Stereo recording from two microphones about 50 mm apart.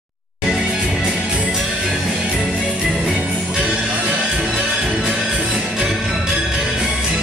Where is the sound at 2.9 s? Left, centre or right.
Centre.